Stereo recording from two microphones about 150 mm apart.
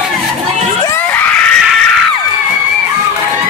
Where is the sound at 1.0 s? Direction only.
10° left (ahead or behind).